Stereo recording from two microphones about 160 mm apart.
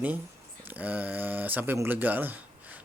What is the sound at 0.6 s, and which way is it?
Speech, 10° right (ahead or behind).